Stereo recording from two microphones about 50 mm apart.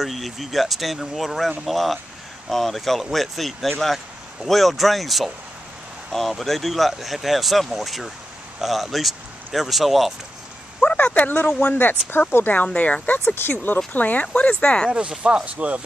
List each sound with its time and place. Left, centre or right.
0.0 s speech: centre
10.8 s speech: left
12.6 s speech: left
13.2 s speech: left
13.9 s speech: left
14.9 s speech: centre